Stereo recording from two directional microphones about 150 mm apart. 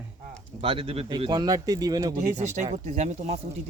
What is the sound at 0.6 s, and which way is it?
Speech, 40° right (ahead or behind).